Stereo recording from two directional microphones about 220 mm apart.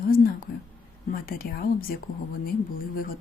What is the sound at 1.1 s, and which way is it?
Speech, 40° left (ahead or behind).